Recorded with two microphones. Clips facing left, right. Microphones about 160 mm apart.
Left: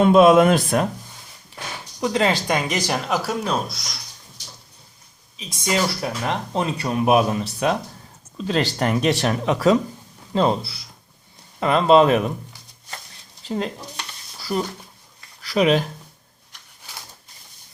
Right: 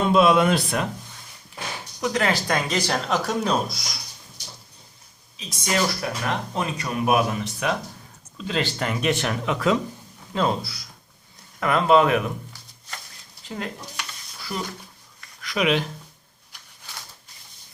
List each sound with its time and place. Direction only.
0.1 s speech: 50° left (ahead or behind)
2.0 s speech: 20° left (ahead or behind); by 3.8 s centre (ahead or behind)
5.4 s speech: 20° left (ahead or behind); by 9.7 s 40° left (ahead or behind)
10.3 s speech: 25° left (ahead or behind)
13.6 s a sound: 30° left (ahead or behind)
15.4 s speech: 35° left (ahead or behind)